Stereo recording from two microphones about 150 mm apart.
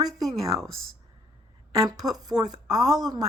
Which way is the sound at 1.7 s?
25° right (ahead or behind).